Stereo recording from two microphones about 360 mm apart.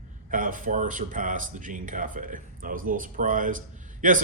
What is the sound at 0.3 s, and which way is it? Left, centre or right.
Speech, right.